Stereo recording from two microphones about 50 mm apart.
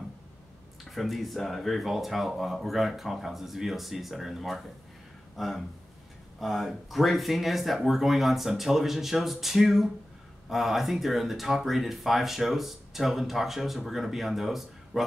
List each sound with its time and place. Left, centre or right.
0.8 s speech: centre